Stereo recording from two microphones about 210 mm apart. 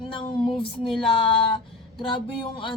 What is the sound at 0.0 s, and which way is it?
Female singing, 25° left (ahead or behind).